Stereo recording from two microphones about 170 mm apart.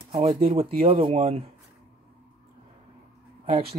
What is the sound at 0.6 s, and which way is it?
Speech, 35° right (ahead or behind).